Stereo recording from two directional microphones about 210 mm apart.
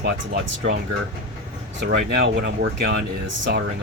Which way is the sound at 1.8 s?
55° right (ahead or behind).